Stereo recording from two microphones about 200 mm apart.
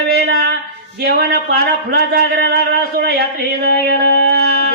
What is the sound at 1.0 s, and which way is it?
Speech, 55° right (ahead or behind).